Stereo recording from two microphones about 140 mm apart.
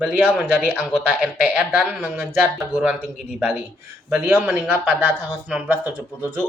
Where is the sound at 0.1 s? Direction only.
10° right (ahead or behind).